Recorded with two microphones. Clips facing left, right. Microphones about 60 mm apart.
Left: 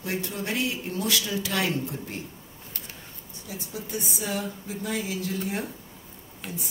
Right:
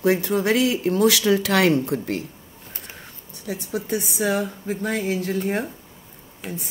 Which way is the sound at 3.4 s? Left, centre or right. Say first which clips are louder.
Right 9 dB; right.